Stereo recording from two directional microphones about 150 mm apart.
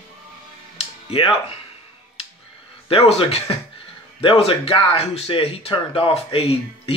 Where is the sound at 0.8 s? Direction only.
40° left (ahead or behind).